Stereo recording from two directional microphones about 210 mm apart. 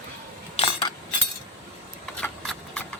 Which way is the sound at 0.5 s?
25° left (ahead or behind).